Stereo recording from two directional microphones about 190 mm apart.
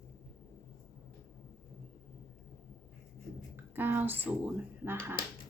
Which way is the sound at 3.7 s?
10° right (ahead or behind).